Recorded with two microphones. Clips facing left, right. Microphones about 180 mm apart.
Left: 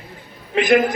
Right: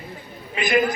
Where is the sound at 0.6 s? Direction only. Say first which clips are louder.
Left 6 dB; 90° left.